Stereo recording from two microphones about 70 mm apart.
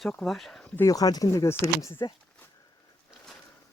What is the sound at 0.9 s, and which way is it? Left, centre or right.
Speech, left.